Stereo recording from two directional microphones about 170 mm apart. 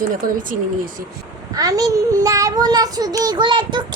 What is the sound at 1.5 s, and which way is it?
Child singing, 20° right (ahead or behind).